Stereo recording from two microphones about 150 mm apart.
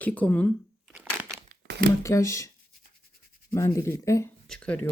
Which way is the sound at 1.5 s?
90° right.